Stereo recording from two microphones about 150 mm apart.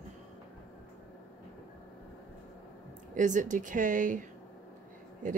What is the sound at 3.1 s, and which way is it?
Speech, 60° right (ahead or behind).